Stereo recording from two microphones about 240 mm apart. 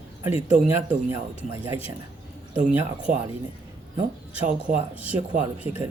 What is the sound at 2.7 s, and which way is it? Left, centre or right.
Speech, centre.